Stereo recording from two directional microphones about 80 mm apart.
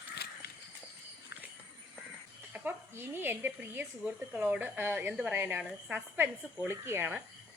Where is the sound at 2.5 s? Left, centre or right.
Right.